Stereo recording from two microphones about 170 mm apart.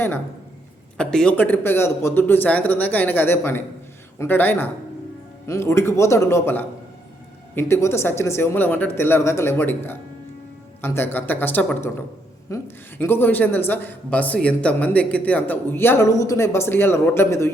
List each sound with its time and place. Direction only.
0.9 s a woman's voice: 5° left (ahead or behind)